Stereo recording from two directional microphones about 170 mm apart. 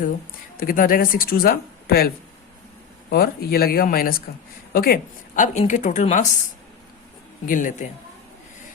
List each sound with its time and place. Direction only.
0.5 s a woman's voice: 55° left (ahead or behind)
7.4 s a woman's voice: 50° left (ahead or behind)